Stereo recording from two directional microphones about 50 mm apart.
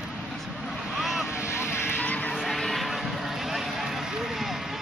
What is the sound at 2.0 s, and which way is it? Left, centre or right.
Music, left.